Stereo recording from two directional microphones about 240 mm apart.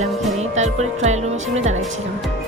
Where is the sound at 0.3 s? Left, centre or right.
Right.